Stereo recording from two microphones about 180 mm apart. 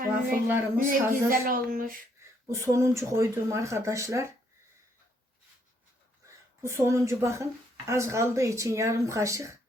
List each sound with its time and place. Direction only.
0.4 s speech: 10° right (ahead or behind)
0.9 s speech: 55° right (ahead or behind)
2.5 s speech: 15° right (ahead or behind)
6.2 s a woman's voice: 15° right (ahead or behind)